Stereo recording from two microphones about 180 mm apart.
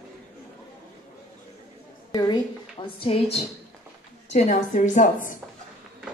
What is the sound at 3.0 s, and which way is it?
A woman's voice, 35° left (ahead or behind).